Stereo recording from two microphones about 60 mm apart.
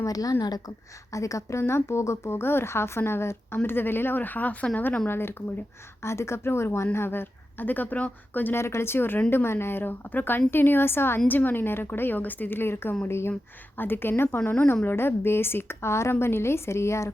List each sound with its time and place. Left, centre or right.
0.0 s a woman's voice: left
1.1 s a woman's voice: left
5.0 s a woman's voice: left
8.5 s a woman's voice: left
13.7 s a woman's voice: left